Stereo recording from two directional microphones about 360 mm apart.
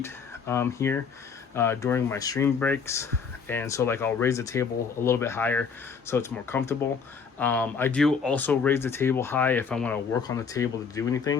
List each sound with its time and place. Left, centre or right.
0.0 s speech: centre